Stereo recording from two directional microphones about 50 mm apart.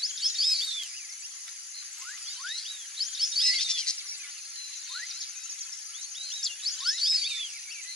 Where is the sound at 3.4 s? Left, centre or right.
Centre.